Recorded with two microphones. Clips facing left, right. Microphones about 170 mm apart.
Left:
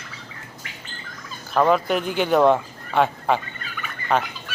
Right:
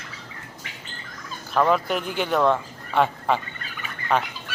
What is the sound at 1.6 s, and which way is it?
Speech, 5° left (ahead or behind).